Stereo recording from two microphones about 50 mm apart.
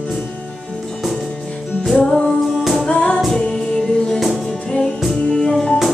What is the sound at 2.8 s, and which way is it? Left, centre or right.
Music, left.